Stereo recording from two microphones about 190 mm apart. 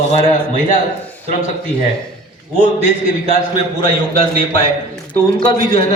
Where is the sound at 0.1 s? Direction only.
40° left (ahead or behind).